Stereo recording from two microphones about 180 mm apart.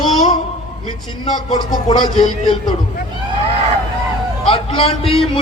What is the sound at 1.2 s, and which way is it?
A man's voice, 25° left (ahead or behind).